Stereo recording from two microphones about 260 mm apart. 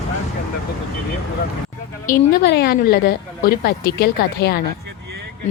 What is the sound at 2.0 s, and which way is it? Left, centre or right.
A woman's voice, left.